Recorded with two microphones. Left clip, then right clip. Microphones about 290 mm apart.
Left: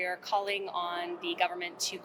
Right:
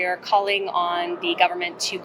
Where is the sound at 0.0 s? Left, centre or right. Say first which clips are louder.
Right 11 dB; centre.